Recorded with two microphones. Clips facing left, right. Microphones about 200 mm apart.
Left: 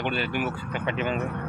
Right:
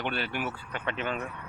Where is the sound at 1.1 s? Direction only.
60° left (ahead or behind).